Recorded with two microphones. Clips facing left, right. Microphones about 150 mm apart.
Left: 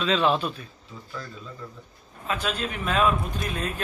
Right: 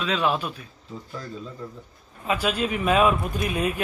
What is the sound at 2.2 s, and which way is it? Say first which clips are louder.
Speech: right 4 dB; 10° right (ahead or behind).